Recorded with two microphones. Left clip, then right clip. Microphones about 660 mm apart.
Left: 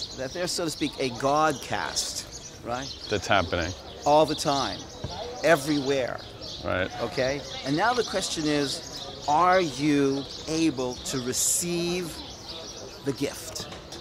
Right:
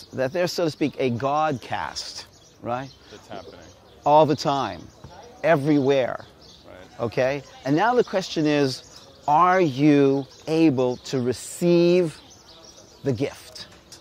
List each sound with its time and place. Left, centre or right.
0.2 s speech: right
3.3 s speech: left
4.0 s speech: right
5.4 s speech: right
5.9 s speech: right
7.0 s speech: right
9.3 s speech: right
10.5 s speech: right
11.1 s speech: right
13.0 s bird: right